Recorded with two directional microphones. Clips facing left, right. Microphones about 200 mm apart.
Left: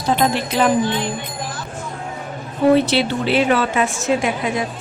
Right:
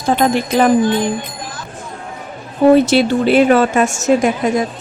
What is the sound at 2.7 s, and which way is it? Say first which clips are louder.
A woman's voice: right 5 dB; 45° right (ahead or behind).